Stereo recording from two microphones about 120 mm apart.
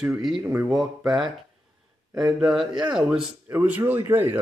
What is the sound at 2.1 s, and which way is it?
Speech, 5° right (ahead or behind).